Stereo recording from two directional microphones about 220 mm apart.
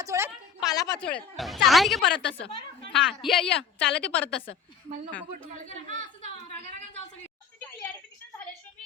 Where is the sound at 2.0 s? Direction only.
55° left (ahead or behind).